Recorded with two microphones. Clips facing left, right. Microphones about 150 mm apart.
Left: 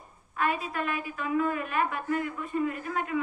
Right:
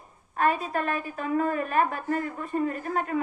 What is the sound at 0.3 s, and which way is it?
A woman's voice, 40° right (ahead or behind).